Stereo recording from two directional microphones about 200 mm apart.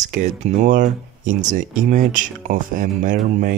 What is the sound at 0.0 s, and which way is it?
Speech, 35° right (ahead or behind).